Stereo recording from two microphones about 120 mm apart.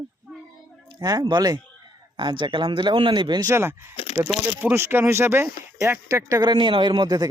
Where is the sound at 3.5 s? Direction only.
20° right (ahead or behind).